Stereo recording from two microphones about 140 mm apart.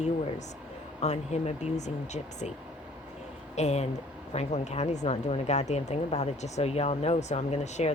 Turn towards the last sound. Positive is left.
turn(degrees=55)  # may be behind; listen again after turning